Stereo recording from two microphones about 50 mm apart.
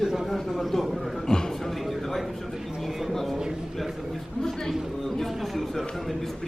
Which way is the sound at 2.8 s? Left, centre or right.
Centre.